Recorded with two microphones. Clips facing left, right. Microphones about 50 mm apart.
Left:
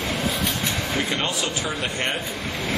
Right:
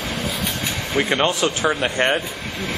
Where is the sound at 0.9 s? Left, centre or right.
Right.